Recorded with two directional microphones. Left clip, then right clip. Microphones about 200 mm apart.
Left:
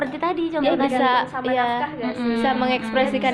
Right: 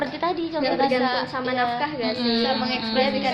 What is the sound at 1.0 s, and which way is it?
Speech, 45° left (ahead or behind).